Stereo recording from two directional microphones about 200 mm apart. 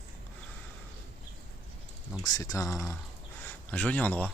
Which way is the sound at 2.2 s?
20° left (ahead or behind).